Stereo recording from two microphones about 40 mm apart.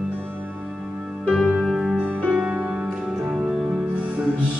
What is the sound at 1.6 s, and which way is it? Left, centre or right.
Music, centre.